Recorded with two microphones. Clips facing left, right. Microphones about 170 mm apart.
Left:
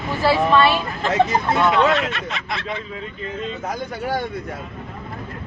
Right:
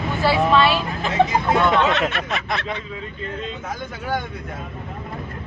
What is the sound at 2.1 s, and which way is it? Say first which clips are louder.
Speech: right 3 dB; 60° right (ahead or behind).